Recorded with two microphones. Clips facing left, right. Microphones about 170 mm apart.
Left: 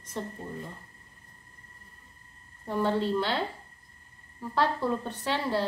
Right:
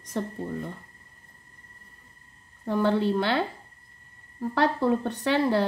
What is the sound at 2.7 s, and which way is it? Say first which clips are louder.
Speech: right 4 dB; 65° right (ahead or behind).